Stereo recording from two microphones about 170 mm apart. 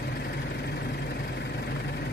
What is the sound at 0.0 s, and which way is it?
Vehicle, 70° left (ahead or behind).